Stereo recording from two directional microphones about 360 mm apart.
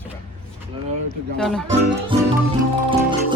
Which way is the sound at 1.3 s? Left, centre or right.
Centre.